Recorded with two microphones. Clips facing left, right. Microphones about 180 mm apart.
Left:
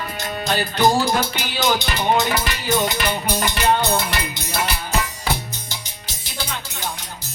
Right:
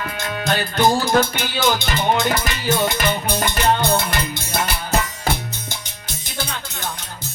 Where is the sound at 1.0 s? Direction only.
50° right (ahead or behind).